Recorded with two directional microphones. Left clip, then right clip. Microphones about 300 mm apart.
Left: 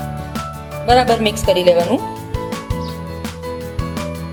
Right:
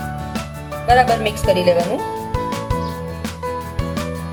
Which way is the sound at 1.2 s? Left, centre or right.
Left.